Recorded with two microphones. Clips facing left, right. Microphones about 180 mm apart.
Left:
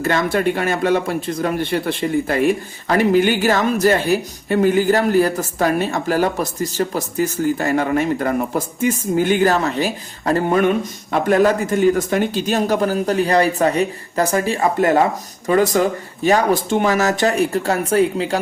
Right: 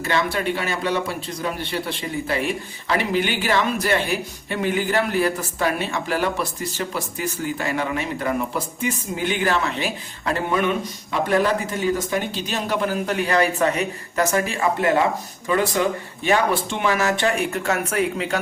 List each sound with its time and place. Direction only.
0.0 s speech: 50° left (ahead or behind); by 18.3 s 30° left (ahead or behind)